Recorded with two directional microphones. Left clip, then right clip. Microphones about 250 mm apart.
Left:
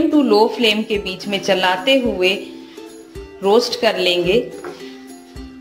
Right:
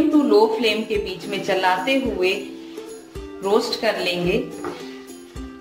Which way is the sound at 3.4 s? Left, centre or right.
Left.